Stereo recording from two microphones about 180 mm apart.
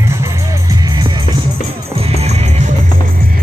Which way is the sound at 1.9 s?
35° right (ahead or behind).